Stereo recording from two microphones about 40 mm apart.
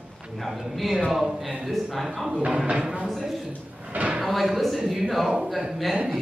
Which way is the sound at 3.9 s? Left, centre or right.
Right.